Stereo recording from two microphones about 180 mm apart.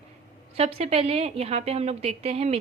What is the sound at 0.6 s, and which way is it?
A woman's voice, 35° right (ahead or behind).